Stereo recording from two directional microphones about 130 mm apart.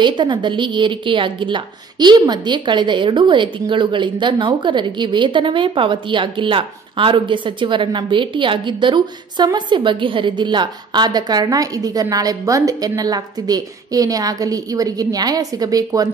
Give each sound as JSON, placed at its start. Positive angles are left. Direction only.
{"t": 0.0, "sound": "a woman's voice", "side_deg": -35}